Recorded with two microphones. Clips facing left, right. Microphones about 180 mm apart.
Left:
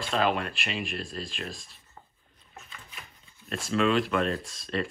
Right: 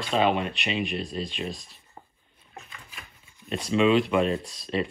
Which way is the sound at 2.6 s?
Centre (ahead or behind).